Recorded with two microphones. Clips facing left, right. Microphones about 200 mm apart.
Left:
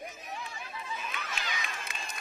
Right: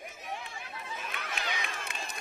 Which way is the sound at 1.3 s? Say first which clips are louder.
Right 2 dB; 60° right (ahead or behind).